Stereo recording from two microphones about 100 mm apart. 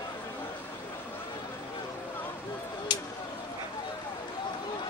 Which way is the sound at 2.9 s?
45° left (ahead or behind).